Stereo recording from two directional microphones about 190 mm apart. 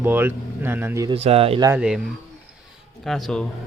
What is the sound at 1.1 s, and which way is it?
Speech, 30° right (ahead or behind).